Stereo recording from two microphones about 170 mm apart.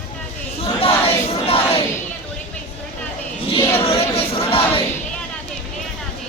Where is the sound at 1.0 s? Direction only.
35° left (ahead or behind).